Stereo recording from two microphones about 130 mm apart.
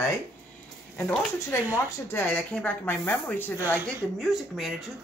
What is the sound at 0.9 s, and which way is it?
Speech, 15° left (ahead or behind).